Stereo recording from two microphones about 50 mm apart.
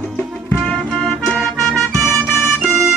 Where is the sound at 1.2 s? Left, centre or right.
Centre.